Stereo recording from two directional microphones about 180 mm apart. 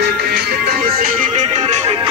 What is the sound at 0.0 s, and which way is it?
Music, 65° right (ahead or behind).